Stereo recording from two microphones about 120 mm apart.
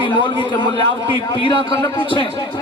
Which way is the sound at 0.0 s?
40° left (ahead or behind).